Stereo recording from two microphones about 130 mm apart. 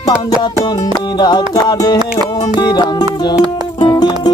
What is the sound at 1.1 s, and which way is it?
Music, 35° left (ahead or behind).